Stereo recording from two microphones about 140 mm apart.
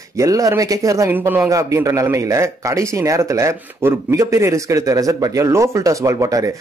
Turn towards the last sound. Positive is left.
turn(degrees=-25)  # may be behind; listen again after turning